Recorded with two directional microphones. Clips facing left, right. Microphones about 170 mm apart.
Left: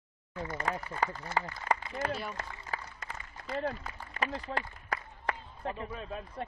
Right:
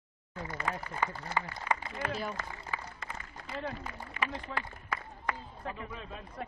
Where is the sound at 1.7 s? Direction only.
45° left (ahead or behind).